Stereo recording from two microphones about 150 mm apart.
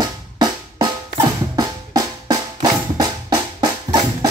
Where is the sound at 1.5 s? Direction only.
25° right (ahead or behind).